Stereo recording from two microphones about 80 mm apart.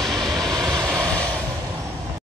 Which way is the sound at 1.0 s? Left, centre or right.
Centre.